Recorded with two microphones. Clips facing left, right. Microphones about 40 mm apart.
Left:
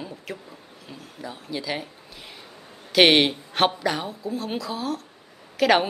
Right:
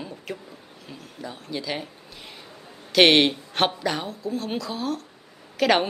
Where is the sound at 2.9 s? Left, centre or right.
Centre.